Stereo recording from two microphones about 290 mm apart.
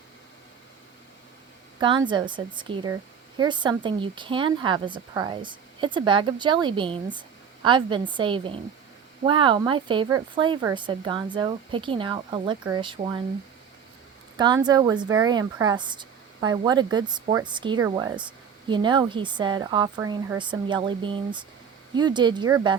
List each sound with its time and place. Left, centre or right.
1.8 s speech: centre
14.3 s speech: centre